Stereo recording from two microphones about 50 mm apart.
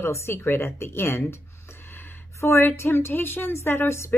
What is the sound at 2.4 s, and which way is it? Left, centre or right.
A woman's voice, left.